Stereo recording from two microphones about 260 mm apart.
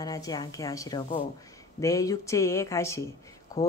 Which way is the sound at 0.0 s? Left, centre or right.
Centre.